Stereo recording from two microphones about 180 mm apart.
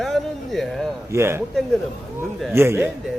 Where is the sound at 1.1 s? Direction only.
15° right (ahead or behind).